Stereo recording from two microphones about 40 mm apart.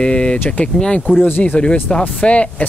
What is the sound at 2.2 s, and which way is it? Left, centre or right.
Speech, left.